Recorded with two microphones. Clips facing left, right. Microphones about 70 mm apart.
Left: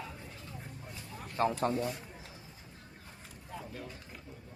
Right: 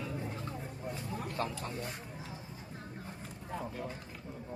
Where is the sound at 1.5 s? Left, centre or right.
Left.